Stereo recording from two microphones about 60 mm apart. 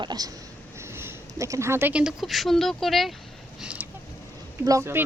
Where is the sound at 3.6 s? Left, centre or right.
Right.